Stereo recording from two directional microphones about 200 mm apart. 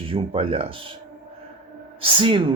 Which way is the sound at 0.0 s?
30° right (ahead or behind).